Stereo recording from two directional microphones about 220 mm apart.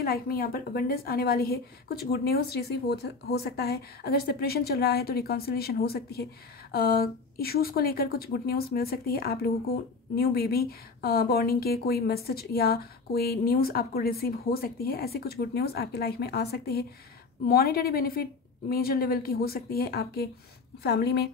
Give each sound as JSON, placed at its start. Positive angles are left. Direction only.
{"t": 0.0, "sound": "speech", "side_deg": 45}